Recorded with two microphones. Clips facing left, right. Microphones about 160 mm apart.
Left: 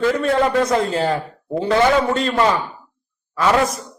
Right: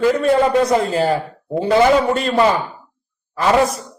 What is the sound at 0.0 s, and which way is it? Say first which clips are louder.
A man's voice: right 3 dB; 10° right (ahead or behind).